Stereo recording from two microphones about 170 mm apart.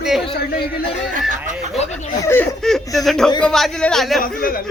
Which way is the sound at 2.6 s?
Centre (ahead or behind).